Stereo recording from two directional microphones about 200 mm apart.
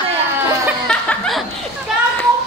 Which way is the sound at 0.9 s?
Centre (ahead or behind).